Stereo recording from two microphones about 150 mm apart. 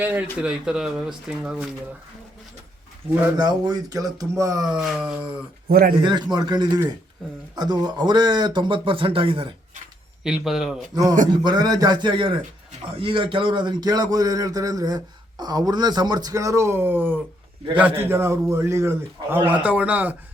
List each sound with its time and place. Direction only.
0.0 s speech: 10° right (ahead or behind)
3.3 s a man's voice: 25° right (ahead or behind)
4.6 s speech: 5° right (ahead or behind)
5.6 s speech: 85° right
6.0 s a man's voice: 30° right (ahead or behind)
10.2 s speech: 5° right (ahead or behind)
11.4 s a man's voice: 25° right (ahead or behind); by 20.1 s 10° right (ahead or behind)